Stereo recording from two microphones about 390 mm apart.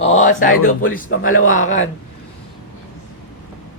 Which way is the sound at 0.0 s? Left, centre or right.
Centre.